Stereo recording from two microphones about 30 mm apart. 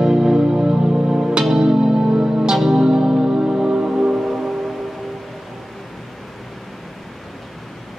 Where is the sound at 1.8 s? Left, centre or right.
Right.